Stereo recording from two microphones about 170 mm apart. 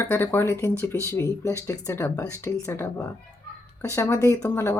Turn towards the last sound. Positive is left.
turn(degrees=15)  # may be behind; listen again after turning